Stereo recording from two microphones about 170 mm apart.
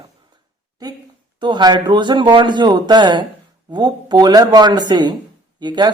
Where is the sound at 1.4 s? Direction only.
25° right (ahead or behind).